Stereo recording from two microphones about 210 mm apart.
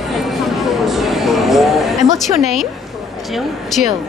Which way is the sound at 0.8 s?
Centre (ahead or behind).